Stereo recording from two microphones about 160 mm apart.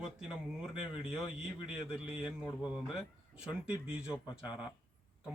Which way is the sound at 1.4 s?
5° right (ahead or behind).